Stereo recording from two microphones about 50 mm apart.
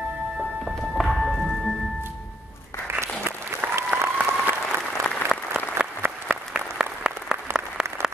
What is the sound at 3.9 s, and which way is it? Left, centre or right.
Applause, right.